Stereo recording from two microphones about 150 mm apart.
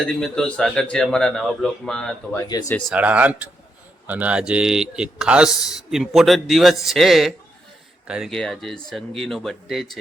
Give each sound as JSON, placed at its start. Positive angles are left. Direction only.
{"t": 0.0, "sound": "speech", "side_deg": 5}
{"t": 2.5, "sound": "speech", "side_deg": 25}
{"t": 2.9, "sound": "speech", "side_deg": -10}